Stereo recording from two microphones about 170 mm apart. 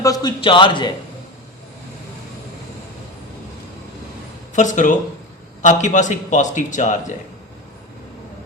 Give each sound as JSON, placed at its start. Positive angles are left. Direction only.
{"t": 0.0, "sound": "a man's voice", "side_deg": 20}
{"t": 4.5, "sound": "a man's voice", "side_deg": 45}